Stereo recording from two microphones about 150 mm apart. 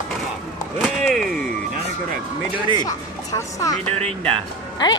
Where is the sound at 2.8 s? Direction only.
20° left (ahead or behind).